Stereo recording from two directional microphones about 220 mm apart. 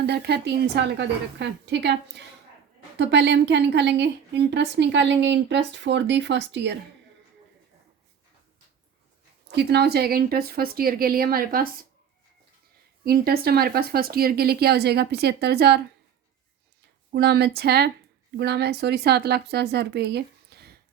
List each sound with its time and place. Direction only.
0.0 s a woman's voice: 50° right (ahead or behind)
9.5 s a woman's voice: 50° right (ahead or behind)
13.1 s a woman's voice: 45° right (ahead or behind)
17.1 s a woman's voice: 50° right (ahead or behind)